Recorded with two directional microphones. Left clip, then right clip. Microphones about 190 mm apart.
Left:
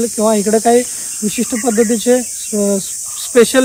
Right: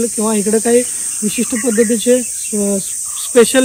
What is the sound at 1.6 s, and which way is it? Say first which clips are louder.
Speech: even; 40° left (ahead or behind).